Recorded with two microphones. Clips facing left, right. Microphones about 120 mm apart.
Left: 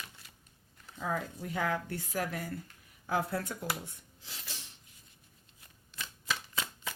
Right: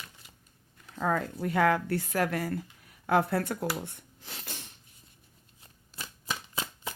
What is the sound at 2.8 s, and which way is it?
Speech, 65° right (ahead or behind).